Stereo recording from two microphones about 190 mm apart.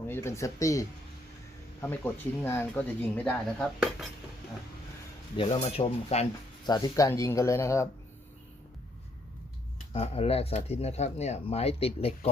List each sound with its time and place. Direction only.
0.1 s speech: 15° left (ahead or behind)
5.4 s speech: 35° left (ahead or behind)
6.7 s speech: 20° left (ahead or behind)
9.9 s speech: 30° left (ahead or behind)